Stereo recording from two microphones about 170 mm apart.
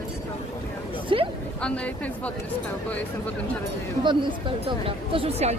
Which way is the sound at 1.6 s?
5° left (ahead or behind).